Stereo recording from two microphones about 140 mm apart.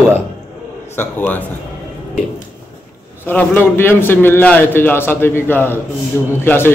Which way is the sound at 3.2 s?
10° left (ahead or behind).